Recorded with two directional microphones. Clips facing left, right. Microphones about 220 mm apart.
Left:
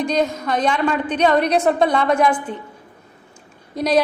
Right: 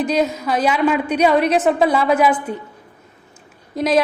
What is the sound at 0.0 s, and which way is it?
A woman's voice, 5° right (ahead or behind).